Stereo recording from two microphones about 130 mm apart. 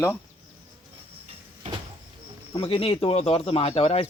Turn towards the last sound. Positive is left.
turn(degrees=50)  # may be behind; listen again after turning